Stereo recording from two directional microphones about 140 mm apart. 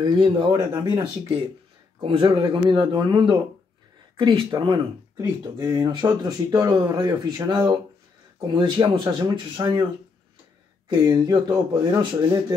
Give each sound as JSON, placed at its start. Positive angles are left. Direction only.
{"t": 0.2, "sound": "speech", "side_deg": -35}
{"t": 10.9, "sound": "speech", "side_deg": -25}